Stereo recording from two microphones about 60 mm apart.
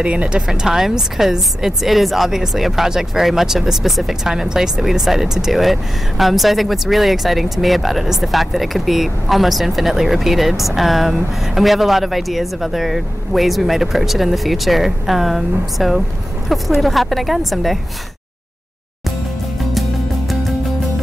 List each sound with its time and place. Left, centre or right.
0.0 s speech: centre